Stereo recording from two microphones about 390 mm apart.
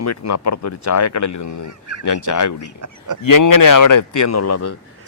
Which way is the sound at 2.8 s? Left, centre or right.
Right.